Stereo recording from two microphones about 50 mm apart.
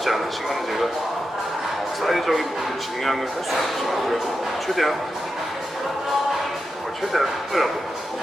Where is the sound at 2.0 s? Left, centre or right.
Centre.